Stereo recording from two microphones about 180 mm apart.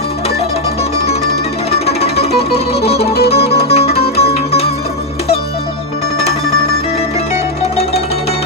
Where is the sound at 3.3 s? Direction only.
35° left (ahead or behind).